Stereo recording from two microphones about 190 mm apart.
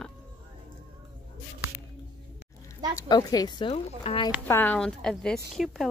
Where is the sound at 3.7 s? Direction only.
35° left (ahead or behind).